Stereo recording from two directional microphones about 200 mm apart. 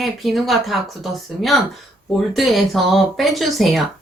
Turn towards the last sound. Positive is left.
turn(degrees=0)  # may be behind; listen again after turning